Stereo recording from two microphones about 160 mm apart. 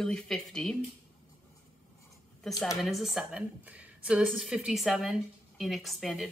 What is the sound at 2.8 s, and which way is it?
A woman's voice, centre (ahead or behind).